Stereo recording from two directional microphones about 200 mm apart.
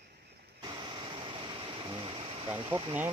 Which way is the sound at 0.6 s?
20° right (ahead or behind).